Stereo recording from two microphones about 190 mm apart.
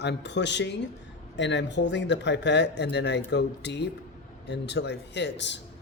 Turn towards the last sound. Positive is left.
turn(degrees=70)  # may be behind; listen again after turning